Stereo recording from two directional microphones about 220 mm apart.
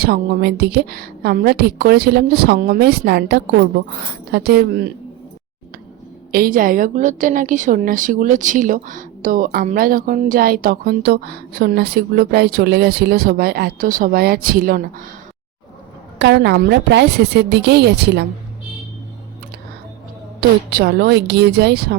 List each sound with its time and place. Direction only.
0.0 s a woman's voice: 45° right (ahead or behind)
6.3 s a woman's voice: 40° right (ahead or behind)
16.1 s a woman's voice: 50° right (ahead or behind)
20.7 s a woman's voice: 45° right (ahead or behind)